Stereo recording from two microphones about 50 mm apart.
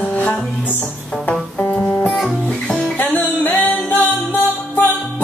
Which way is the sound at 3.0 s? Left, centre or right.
Left.